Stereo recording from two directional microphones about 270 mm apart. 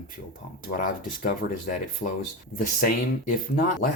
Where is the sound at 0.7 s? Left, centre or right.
Left.